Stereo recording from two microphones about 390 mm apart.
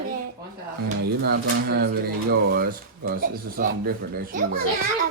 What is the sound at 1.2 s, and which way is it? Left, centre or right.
Speech, right.